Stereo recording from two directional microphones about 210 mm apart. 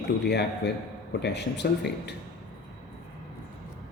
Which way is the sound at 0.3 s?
50° left (ahead or behind).